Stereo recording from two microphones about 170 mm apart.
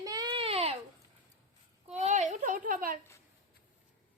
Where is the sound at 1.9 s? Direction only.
45° right (ahead or behind).